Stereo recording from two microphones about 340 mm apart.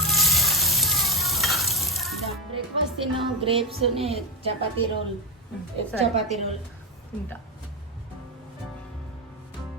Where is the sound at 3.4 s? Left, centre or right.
Centre.